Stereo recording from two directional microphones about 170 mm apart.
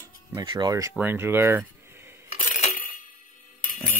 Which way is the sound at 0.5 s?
25° right (ahead or behind).